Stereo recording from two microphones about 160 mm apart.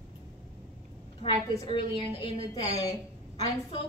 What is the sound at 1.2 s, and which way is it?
A woman's voice, 35° left (ahead or behind).